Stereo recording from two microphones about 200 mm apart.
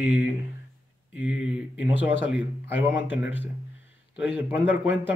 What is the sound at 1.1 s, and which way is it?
A man's voice, 5° right (ahead or behind).